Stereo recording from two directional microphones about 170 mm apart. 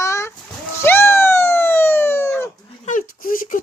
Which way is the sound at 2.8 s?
50° left (ahead or behind).